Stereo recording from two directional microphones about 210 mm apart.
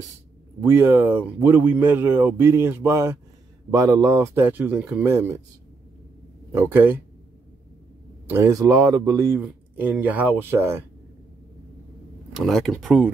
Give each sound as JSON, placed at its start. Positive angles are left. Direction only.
{"t": 0.6, "sound": "speech", "side_deg": -10}
{"t": 6.5, "sound": "speech", "side_deg": -10}
{"t": 8.3, "sound": "speech", "side_deg": -15}
{"t": 12.4, "sound": "speech", "side_deg": 0}